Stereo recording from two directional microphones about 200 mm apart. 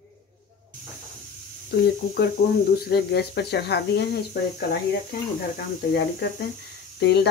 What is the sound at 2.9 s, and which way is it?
Speech, 55° left (ahead or behind).